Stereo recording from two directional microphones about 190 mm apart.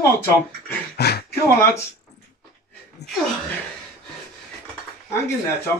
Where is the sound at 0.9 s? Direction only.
60° left (ahead or behind).